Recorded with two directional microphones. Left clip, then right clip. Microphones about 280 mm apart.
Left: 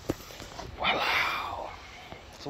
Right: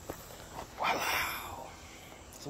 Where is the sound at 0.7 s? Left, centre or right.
Centre.